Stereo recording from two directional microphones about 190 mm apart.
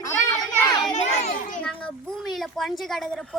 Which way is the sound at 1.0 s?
35° left (ahead or behind).